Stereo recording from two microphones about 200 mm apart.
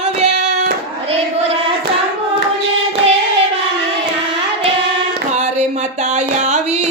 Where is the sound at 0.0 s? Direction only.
35° right (ahead or behind).